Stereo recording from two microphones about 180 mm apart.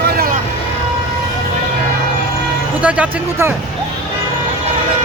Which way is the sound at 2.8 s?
5° right (ahead or behind).